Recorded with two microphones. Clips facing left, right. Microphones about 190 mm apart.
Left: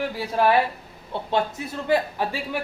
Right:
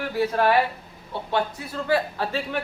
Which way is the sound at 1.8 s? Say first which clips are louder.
Left 1 dB; 15° left (ahead or behind).